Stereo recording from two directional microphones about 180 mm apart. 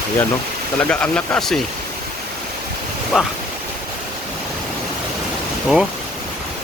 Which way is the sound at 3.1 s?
Centre (ahead or behind).